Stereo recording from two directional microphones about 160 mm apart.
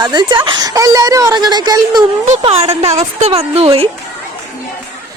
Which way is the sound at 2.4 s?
35° right (ahead or behind).